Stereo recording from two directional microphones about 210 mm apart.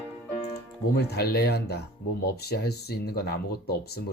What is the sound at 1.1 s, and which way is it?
Speech, 50° left (ahead or behind).